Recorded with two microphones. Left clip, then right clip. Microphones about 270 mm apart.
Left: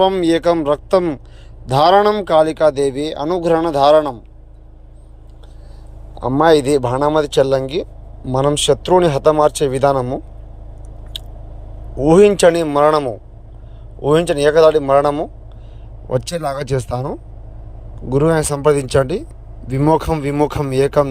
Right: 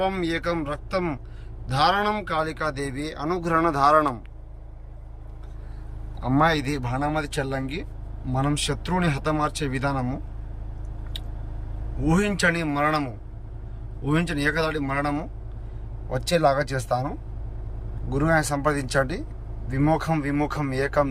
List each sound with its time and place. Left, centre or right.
0.0 s a man's voice: centre
7.0 s a man's voice: centre
12.0 s a man's voice: centre
14.1 s a man's voice: centre
16.0 s speech: left
16.3 s speech: centre
16.6 s speech: left